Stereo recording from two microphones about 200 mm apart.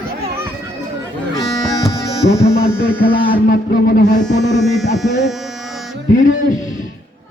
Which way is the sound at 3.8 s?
45° left (ahead or behind).